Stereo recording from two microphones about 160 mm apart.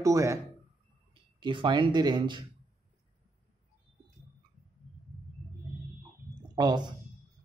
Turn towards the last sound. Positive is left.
turn(degrees=-25)  # may be behind; listen again after turning